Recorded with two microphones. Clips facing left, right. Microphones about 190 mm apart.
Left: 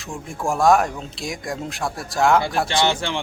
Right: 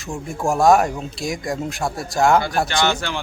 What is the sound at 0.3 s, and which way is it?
Speech, centre (ahead or behind).